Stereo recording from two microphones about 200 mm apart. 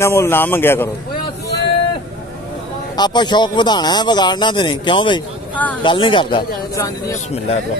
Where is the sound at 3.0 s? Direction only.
20° left (ahead or behind).